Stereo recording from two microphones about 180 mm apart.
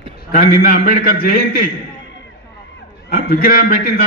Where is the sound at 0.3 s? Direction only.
55° left (ahead or behind).